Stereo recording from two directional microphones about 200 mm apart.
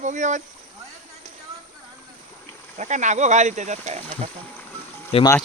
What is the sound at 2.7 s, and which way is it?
Speech, 35° right (ahead or behind).